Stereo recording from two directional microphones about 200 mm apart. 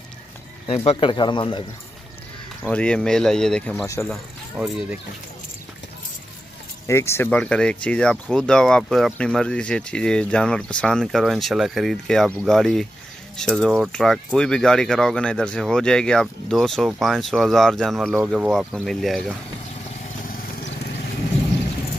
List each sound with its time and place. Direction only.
0.7 s speech: 30° left (ahead or behind)
2.7 s speech: 5° left (ahead or behind)
3.8 s speech: 15° left (ahead or behind)
4.1 s speech: centre (ahead or behind)
6.9 s speech: 15° left (ahead or behind)